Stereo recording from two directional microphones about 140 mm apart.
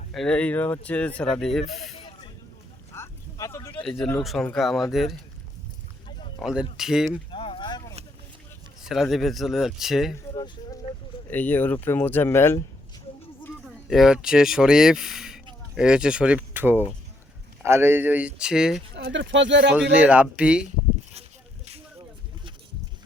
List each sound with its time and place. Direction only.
0.1 s speech: 5° left (ahead or behind)
2.0 s snake: 40° left (ahead or behind)
2.9 s a sound: 20° left (ahead or behind)
3.8 s speech: 5° left (ahead or behind)
6.1 s boat: 35° left (ahead or behind)
6.4 s speech: 5° right (ahead or behind)
7.3 s a sound: 40° left (ahead or behind)
8.8 s speech: centre (ahead or behind)
10.3 s a sound: 35° left (ahead or behind)
11.3 s speech: 10° left (ahead or behind)
13.7 s speech: 5° right (ahead or behind)
21.1 s a sound: 50° right (ahead or behind)